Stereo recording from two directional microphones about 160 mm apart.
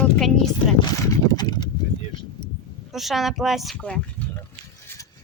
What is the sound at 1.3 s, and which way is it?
Horse, 25° left (ahead or behind).